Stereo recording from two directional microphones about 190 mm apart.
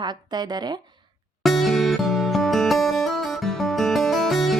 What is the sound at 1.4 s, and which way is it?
Music, centre (ahead or behind).